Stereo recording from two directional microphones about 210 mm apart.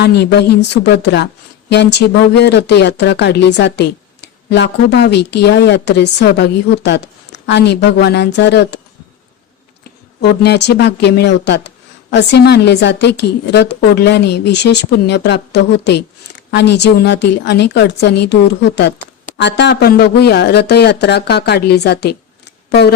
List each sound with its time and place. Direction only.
0.0 s speech: 50° left (ahead or behind)
10.2 s a woman's voice: 50° left (ahead or behind)